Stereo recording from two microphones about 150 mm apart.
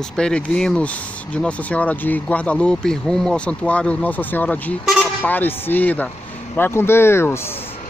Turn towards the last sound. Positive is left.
turn(degrees=15)  # may be behind; listen again after turning